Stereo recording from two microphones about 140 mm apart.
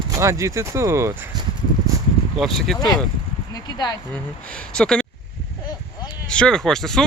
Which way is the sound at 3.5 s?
25° left (ahead or behind).